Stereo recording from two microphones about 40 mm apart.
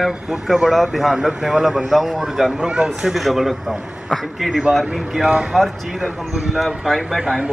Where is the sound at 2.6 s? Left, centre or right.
Right.